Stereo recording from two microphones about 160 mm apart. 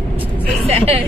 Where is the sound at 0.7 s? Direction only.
40° right (ahead or behind).